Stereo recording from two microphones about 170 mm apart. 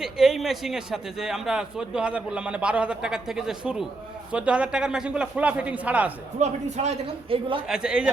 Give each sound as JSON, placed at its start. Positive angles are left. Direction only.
{"t": 0.0, "sound": "a man's voice", "side_deg": 0}
{"t": 6.4, "sound": "speech", "side_deg": -40}
{"t": 7.7, "sound": "a man's voice", "side_deg": -5}